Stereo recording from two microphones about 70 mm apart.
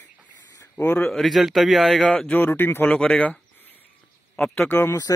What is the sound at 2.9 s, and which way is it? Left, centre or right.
Speech, centre.